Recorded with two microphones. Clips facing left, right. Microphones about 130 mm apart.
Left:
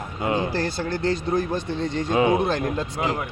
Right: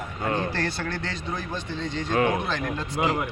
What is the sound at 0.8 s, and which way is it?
A man's voice, 40° left (ahead or behind).